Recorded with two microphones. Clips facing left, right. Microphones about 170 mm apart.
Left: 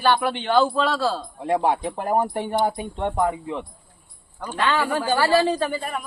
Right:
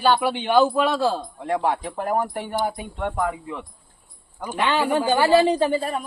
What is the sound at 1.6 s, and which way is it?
Speech, 20° left (ahead or behind).